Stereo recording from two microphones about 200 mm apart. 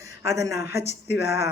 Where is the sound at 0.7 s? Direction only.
55° left (ahead or behind).